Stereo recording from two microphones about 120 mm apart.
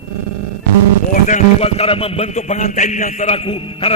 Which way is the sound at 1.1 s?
90° left.